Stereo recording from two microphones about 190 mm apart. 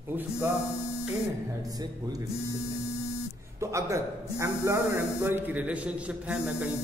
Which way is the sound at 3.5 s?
15° right (ahead or behind).